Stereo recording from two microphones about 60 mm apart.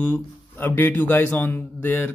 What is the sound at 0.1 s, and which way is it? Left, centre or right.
Speech, left.